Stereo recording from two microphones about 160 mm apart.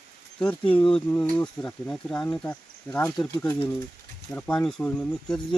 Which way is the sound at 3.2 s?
25° left (ahead or behind).